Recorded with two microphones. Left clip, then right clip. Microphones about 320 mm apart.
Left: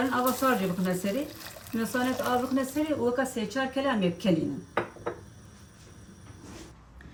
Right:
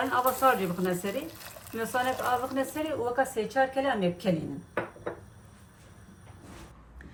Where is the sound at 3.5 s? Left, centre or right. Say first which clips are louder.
Right 2 dB; centre.